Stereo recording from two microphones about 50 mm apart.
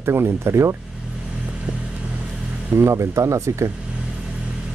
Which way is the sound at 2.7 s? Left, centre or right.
Right.